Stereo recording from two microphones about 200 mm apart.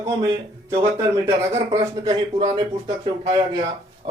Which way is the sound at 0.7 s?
15° right (ahead or behind).